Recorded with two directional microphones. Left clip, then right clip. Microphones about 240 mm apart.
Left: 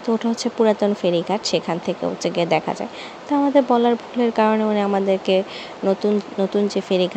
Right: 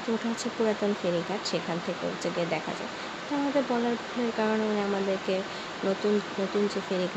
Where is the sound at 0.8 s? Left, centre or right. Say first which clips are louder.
Left 9 dB; left.